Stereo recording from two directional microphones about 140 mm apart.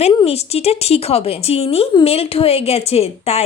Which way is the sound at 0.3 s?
45° left (ahead or behind).